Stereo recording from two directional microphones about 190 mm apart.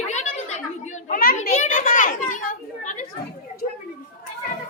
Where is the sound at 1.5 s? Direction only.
40° left (ahead or behind).